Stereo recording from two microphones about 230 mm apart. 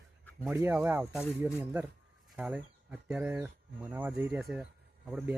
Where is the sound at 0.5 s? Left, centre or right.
Centre.